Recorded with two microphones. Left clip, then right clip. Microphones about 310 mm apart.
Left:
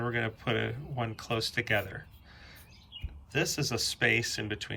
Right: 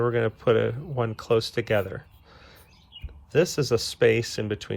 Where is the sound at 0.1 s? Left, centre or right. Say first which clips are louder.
Right 9 dB; centre.